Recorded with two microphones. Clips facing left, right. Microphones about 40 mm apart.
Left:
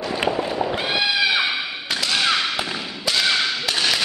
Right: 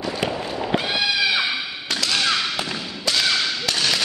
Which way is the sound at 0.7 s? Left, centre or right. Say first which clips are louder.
Right 2 dB; centre.